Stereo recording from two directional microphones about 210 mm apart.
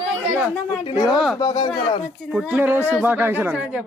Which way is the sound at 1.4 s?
20° left (ahead or behind).